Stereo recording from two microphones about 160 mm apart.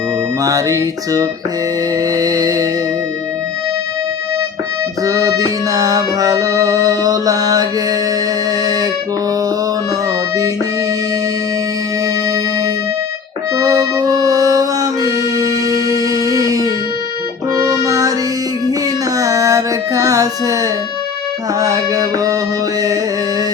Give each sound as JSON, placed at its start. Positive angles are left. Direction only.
{"t": 0.4, "sound": "music", "side_deg": -20}
{"t": 5.0, "sound": "music", "side_deg": -20}
{"t": 13.6, "sound": "music", "side_deg": -20}
{"t": 19.1, "sound": "a sound", "side_deg": -20}
{"t": 21.6, "sound": "music", "side_deg": -20}